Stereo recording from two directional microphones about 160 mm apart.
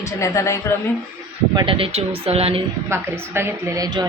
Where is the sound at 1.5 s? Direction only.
35° right (ahead or behind).